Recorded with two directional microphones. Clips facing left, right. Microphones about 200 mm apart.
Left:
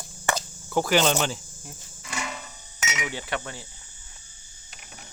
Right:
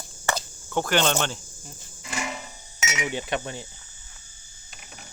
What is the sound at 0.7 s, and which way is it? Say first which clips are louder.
Speech: left 1 dB; 5° left (ahead or behind).